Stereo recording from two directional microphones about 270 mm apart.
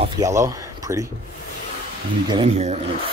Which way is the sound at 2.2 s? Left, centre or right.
Right.